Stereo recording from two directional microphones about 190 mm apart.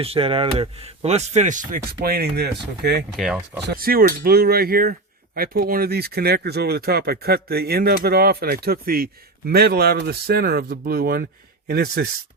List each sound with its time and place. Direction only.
0.0 s speech: 30° right (ahead or behind); by 3.0 s 60° right (ahead or behind)
3.2 s speech: 5° right (ahead or behind)
3.7 s speech: 50° right (ahead or behind)